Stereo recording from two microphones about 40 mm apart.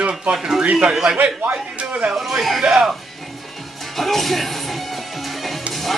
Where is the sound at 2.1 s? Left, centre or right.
Centre.